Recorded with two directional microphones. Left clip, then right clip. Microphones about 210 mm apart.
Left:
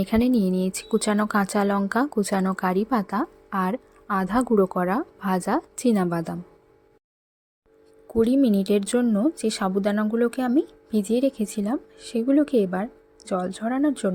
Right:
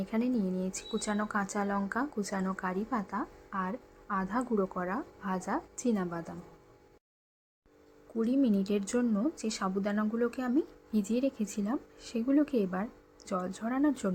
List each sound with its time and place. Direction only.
0.0 s speech: 45° left (ahead or behind)
8.1 s speech: 40° left (ahead or behind)